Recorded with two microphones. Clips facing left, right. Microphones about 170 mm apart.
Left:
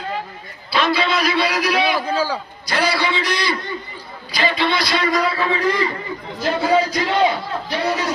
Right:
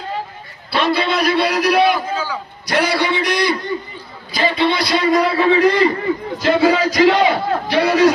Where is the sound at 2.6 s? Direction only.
65° right (ahead or behind).